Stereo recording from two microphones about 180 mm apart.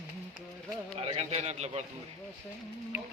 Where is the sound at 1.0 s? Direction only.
35° right (ahead or behind).